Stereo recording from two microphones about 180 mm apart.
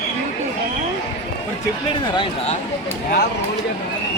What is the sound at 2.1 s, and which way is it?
Speech, 30° left (ahead or behind).